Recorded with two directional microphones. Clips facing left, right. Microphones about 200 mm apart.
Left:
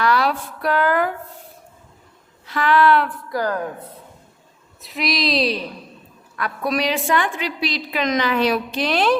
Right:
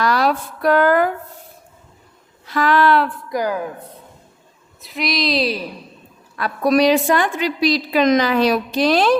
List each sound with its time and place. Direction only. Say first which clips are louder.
0.0 s speech: right 2 dB; 40° right (ahead or behind)
2.5 s a woman's voice: right 1 dB; 40° right (ahead or behind)
3.2 s speech: right 2 dB; 15° right (ahead or behind)
4.8 s a woman's voice: right 1 dB; centre (ahead or behind)
6.3 s a woman's voice: right 7 dB; 30° right (ahead or behind)